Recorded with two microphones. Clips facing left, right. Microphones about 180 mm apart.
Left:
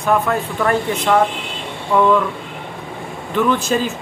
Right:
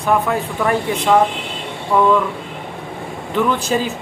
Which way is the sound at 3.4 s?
15° right (ahead or behind).